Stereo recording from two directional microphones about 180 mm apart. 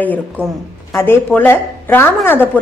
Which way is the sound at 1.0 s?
10° left (ahead or behind).